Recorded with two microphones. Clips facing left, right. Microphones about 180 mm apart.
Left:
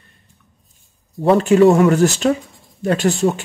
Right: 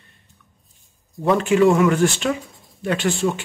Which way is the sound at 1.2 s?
35° left (ahead or behind).